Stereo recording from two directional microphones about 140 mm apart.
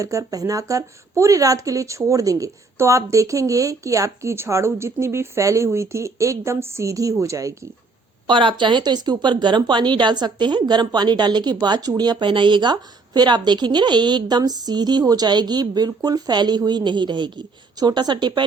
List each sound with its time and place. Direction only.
0.0 s speech: 25° right (ahead or behind)
8.3 s speech: 35° right (ahead or behind)